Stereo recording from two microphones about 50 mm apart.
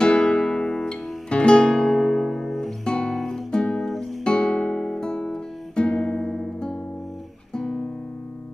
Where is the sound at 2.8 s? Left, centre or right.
Centre.